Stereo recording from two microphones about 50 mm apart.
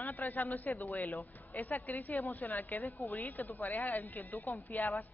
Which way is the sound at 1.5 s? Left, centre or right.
Left.